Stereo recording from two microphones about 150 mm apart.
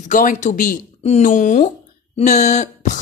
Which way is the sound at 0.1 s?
60° left (ahead or behind).